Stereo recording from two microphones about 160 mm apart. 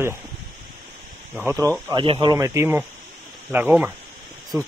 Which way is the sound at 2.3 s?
15° right (ahead or behind).